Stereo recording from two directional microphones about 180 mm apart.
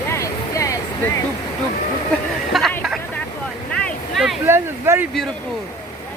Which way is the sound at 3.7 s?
Centre (ahead or behind).